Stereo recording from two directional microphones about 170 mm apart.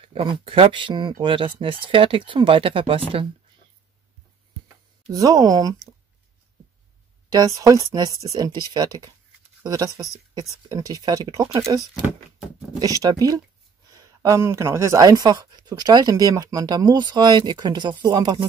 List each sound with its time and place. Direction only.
0.0 s speech: 30° right (ahead or behind)
5.1 s speech: 20° right (ahead or behind)
7.2 s speech: 20° right (ahead or behind)
11.9 s speech: 5° right (ahead or behind)
13.0 s speech: 20° right (ahead or behind)